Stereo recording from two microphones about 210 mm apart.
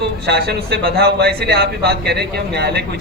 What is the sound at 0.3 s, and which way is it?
A man's voice, 50° right (ahead or behind).